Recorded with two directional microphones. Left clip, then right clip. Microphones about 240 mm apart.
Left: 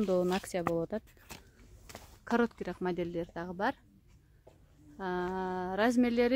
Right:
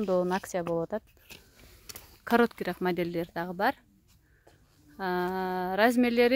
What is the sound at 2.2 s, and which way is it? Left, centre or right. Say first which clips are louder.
A woman's voice: right 6 dB; centre.